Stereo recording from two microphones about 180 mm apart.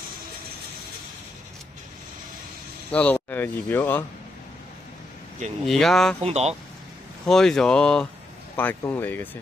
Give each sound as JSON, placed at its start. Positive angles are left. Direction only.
{"t": 2.9, "sound": "speech", "side_deg": 10}
{"t": 5.7, "sound": "speech", "side_deg": 0}
{"t": 6.2, "sound": "speech", "side_deg": -35}
{"t": 7.2, "sound": "speech", "side_deg": 0}